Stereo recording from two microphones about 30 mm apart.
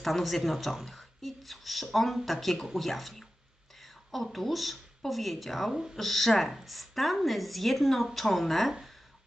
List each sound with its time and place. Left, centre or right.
0.0 s speech: centre
5.7 s speech: centre
6.0 s speech: centre